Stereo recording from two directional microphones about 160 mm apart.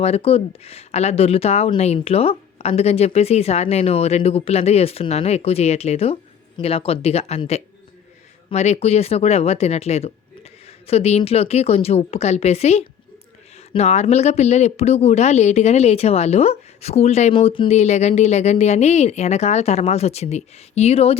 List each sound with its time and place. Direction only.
0.0 s a woman's voice: 40° left (ahead or behind)